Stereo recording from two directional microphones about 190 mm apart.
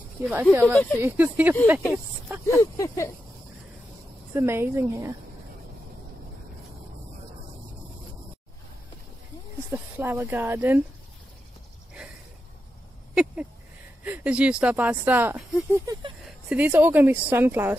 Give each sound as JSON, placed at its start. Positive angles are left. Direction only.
{"t": 0.3, "sound": "speech", "side_deg": -10}
{"t": 2.6, "sound": "speech", "side_deg": 15}
{"t": 4.3, "sound": "speech", "side_deg": -15}
{"t": 9.9, "sound": "speech", "side_deg": -10}
{"t": 13.1, "sound": "speech", "side_deg": -5}
{"t": 15.8, "sound": "a sound", "side_deg": -20}
{"t": 16.4, "sound": "speech", "side_deg": -10}